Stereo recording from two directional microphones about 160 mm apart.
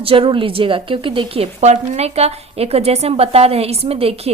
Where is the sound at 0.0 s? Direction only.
35° right (ahead or behind).